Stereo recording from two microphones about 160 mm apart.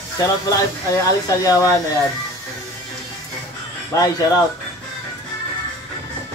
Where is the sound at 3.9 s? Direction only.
20° left (ahead or behind).